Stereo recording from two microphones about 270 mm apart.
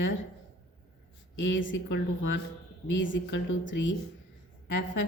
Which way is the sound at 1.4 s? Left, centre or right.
Left.